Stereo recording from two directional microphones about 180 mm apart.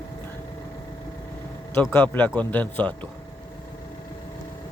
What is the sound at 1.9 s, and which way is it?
Speech, 10° left (ahead or behind).